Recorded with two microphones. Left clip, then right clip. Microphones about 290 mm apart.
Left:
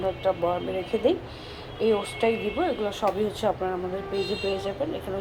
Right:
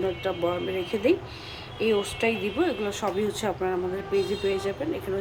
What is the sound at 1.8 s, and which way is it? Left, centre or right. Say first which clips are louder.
Speech: left 1 dB; centre.